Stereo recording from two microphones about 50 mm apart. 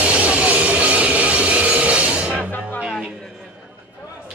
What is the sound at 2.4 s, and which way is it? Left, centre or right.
Music, left.